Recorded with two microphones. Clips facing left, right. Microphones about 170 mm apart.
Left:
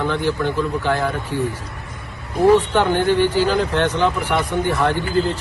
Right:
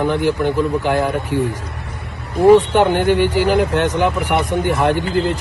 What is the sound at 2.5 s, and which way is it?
Speech, 15° right (ahead or behind).